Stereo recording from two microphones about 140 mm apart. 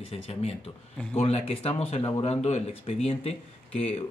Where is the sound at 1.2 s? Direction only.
45° left (ahead or behind).